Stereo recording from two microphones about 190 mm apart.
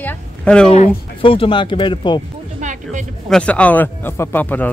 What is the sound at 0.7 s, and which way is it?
Speech, 30° left (ahead or behind).